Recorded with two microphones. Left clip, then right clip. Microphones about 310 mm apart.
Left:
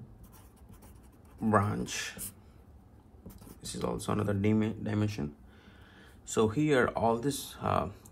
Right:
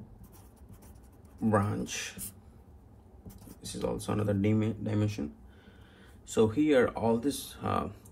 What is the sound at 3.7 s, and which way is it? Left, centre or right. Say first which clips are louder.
Speech: even; left.